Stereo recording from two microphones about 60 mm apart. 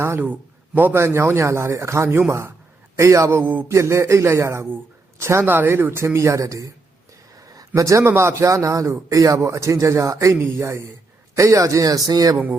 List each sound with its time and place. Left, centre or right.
0.2 s a man's voice: right
0.9 s a man's voice: right
5.5 s a man's voice: right
6.1 s a man's voice: right
7.8 s a man's voice: right
8.0 s a man's voice: right